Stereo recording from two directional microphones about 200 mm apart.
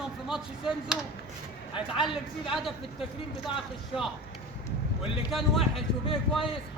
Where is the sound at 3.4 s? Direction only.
Centre (ahead or behind).